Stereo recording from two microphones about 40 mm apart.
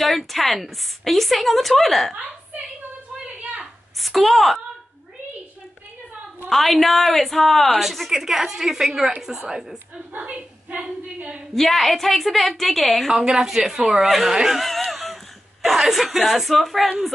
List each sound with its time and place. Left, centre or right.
0.3 s a woman's voice: centre
2.1 s a sound: right
4.0 s a woman's voice: centre
6.5 s a woman's voice: centre
8.1 s a woman's voice: centre
10.1 s a woman's voice: right
11.5 s a woman's voice: centre
13.2 s a woman's voice: centre
14.6 s a sound: centre
15.6 s a woman's voice: centre